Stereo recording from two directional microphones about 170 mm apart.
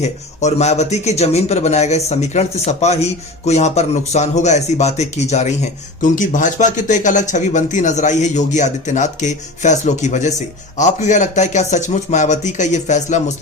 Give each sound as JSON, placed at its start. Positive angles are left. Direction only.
{"t": 0.0, "sound": "speech", "side_deg": 40}